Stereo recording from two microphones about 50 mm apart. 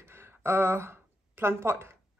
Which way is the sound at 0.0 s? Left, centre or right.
Right.